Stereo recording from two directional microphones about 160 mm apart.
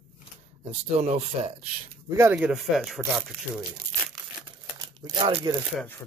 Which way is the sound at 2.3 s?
5° right (ahead or behind).